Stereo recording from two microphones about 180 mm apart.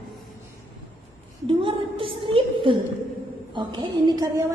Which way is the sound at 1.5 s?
30° right (ahead or behind).